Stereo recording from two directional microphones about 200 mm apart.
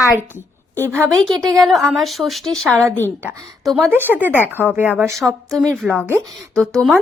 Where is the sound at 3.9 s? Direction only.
10° right (ahead or behind).